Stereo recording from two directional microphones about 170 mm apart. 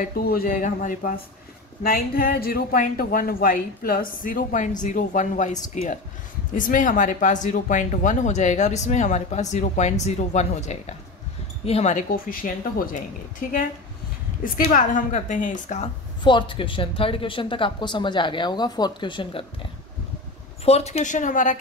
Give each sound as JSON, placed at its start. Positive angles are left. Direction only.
{"t": 0.0, "sound": "a woman's voice", "side_deg": 65}
{"t": 16.3, "sound": "speech", "side_deg": 30}
{"t": 20.6, "sound": "speech", "side_deg": 40}